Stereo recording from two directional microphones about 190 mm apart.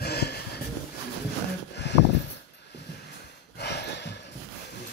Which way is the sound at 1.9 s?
65° left (ahead or behind).